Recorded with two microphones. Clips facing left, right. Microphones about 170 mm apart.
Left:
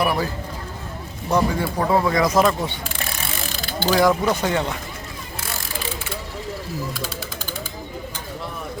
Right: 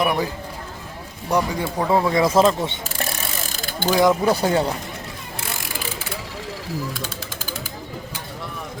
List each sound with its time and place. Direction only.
0.0 s speech: 15° right (ahead or behind)
1.3 s speech: 15° right (ahead or behind)
1.6 s speech: 25° right (ahead or behind)
3.5 s pulleys: 45° right (ahead or behind)
3.8 s speech: 20° right (ahead or behind)
4.2 s speech: 35° right (ahead or behind)